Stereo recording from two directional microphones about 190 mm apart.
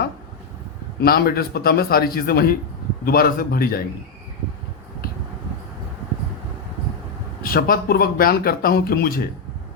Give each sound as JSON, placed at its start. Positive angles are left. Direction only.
{"t": 1.0, "sound": "speech", "side_deg": 55}
{"t": 7.4, "sound": "speech", "side_deg": 50}